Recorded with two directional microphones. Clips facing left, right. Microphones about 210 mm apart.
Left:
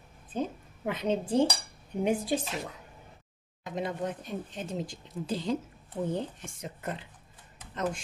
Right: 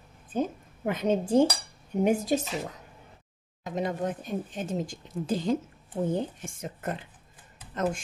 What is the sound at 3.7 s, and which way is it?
Speech, 45° right (ahead or behind).